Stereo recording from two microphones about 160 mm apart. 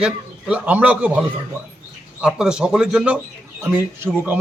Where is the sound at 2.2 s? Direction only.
5° right (ahead or behind).